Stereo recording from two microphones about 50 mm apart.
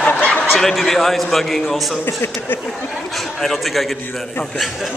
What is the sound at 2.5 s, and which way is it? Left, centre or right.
Speech, left.